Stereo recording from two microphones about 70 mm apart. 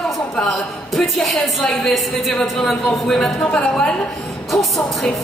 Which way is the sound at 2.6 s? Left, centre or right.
Centre.